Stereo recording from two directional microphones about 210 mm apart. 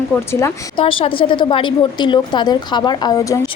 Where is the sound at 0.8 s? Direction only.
25° left (ahead or behind).